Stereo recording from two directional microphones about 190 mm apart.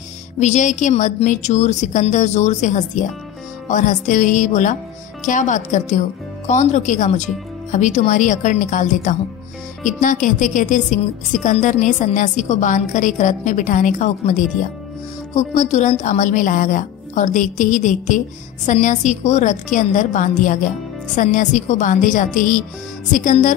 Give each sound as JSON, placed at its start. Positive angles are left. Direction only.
{"t": 0.4, "sound": "a woman's voice", "side_deg": 40}